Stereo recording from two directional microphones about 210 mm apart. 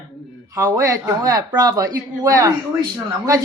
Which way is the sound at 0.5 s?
15° right (ahead or behind).